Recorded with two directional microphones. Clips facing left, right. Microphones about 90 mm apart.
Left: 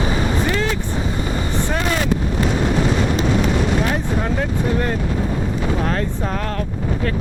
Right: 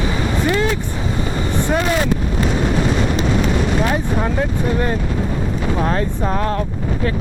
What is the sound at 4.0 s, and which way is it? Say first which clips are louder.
Speech: right 2 dB; 10° right (ahead or behind).